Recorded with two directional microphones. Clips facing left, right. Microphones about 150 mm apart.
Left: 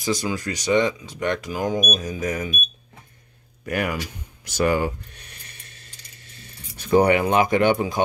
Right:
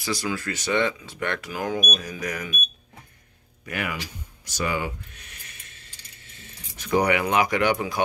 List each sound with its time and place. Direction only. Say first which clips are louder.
0.0 s speech: left 3 dB; 20° left (ahead or behind)
3.6 s a sound: left 6 dB; 45° left (ahead or behind)
6.8 s speech: left 5 dB; 30° left (ahead or behind)